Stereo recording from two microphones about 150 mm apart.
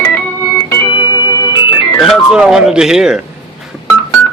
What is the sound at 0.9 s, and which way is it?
Organ, 30° left (ahead or behind).